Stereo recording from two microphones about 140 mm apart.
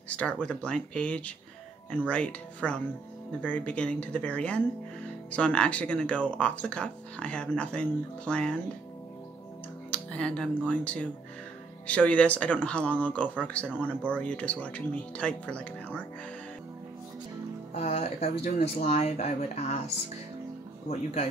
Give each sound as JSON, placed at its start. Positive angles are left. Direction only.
{"t": 0.1, "sound": "speech", "side_deg": 10}
{"t": 9.8, "sound": "speech", "side_deg": 10}
{"t": 17.7, "sound": "speech", "side_deg": 50}
{"t": 20.9, "sound": "speech", "side_deg": 50}